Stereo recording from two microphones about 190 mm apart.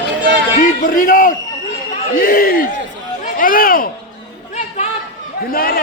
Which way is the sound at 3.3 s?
45° left (ahead or behind).